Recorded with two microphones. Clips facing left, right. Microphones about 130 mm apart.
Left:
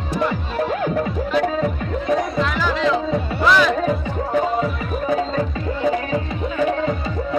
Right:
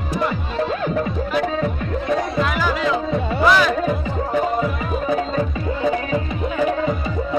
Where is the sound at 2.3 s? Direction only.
5° right (ahead or behind).